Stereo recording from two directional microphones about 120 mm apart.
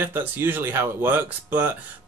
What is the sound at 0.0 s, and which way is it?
Speech, 15° right (ahead or behind).